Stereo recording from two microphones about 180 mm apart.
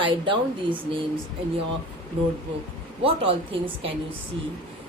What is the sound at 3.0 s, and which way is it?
Speech, 30° right (ahead or behind).